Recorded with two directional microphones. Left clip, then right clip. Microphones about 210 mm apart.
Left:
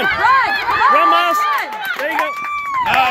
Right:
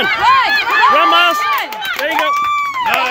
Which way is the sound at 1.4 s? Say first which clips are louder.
Right 1 dB; 50° right (ahead or behind).